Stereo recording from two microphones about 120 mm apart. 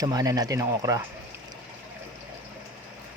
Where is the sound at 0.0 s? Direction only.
30° right (ahead or behind).